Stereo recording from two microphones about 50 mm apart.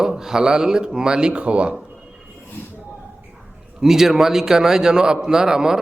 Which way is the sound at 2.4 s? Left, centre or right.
Left.